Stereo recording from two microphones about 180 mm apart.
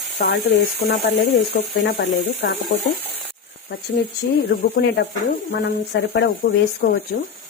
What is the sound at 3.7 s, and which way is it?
Speech, 65° left (ahead or behind).